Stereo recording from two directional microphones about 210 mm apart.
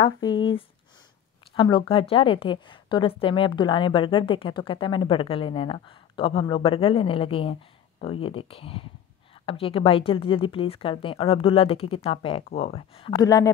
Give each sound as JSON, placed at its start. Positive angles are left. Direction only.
{"t": 0.0, "sound": "a woman's voice", "side_deg": 20}
{"t": 1.5, "sound": "a woman's voice", "side_deg": 25}